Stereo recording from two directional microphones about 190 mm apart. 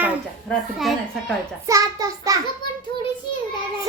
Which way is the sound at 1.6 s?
20° right (ahead or behind).